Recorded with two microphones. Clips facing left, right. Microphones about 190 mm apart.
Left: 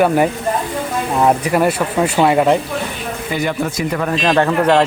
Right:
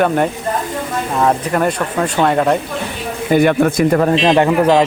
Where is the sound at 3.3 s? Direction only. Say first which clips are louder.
Right 9 dB; 55° right (ahead or behind).